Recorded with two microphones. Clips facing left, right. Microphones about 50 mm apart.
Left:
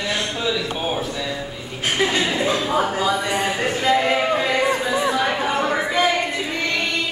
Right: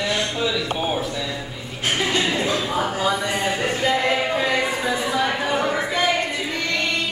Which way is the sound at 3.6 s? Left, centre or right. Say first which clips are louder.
Even; centre.